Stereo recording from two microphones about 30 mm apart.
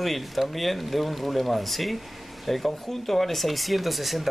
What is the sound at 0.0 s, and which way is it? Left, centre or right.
Speech, centre.